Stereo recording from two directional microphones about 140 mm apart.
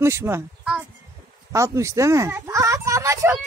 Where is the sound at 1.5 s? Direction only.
20° right (ahead or behind).